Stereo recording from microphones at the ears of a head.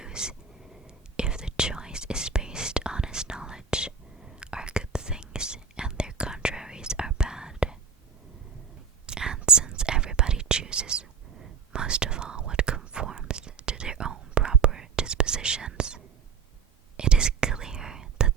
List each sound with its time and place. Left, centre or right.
0.0 s whispering: centre
9.0 s whispering: right